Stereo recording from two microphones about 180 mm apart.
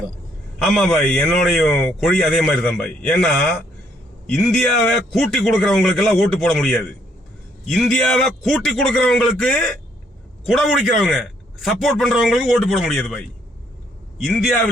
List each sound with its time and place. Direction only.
0.6 s a man's voice: centre (ahead or behind)
14.3 s a man's voice: centre (ahead or behind)